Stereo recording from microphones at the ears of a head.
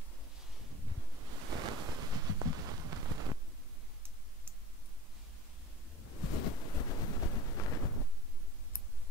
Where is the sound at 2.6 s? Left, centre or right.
Right.